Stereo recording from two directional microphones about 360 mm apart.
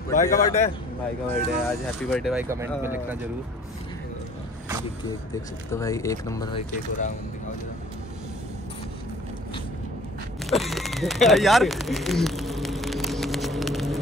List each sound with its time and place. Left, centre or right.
0.1 s a man's voice: left
1.3 s speech: centre
5.7 s speech: centre
10.5 s a sound: centre